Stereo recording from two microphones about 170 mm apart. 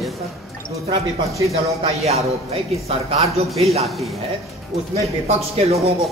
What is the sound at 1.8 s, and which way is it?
Speech, 40° right (ahead or behind).